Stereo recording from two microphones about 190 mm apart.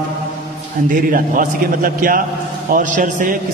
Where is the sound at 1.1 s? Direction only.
45° right (ahead or behind).